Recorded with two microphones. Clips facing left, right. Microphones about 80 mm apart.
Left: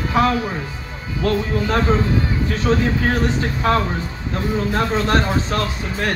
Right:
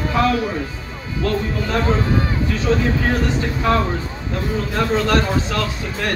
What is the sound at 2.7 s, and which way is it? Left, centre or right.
Speech, left.